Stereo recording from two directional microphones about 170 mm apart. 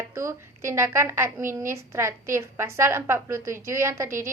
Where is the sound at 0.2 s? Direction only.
15° right (ahead or behind).